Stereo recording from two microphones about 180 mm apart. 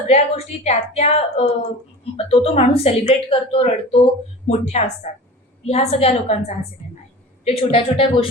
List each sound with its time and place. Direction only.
0.1 s a woman's voice: 40° left (ahead or behind)